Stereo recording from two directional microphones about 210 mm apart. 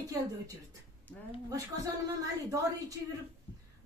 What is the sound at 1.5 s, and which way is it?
Speech, 15° right (ahead or behind).